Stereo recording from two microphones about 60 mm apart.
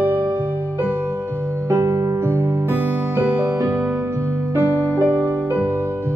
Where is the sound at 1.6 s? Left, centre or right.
Right.